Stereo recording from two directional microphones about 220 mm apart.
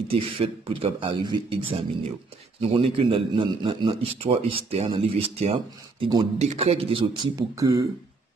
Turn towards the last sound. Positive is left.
turn(degrees=-15)  # may be behind; listen again after turning